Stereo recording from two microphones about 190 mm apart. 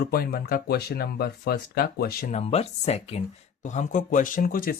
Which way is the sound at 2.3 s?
35° left (ahead or behind).